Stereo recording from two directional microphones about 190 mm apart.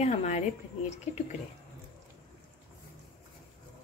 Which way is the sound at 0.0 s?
35° left (ahead or behind).